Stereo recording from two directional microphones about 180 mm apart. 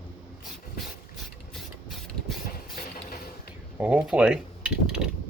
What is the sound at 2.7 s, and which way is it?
Mechanisms, 55° left (ahead or behind).